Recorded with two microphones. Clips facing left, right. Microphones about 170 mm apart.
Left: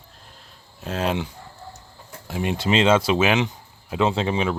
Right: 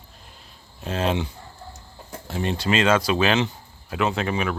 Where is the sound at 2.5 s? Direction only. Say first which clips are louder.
Left 2 dB; 20° left (ahead or behind).